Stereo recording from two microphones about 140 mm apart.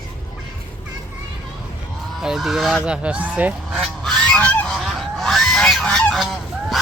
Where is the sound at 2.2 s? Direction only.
Centre (ahead or behind).